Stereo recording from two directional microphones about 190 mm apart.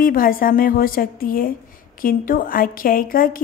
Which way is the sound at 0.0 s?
50° left (ahead or behind).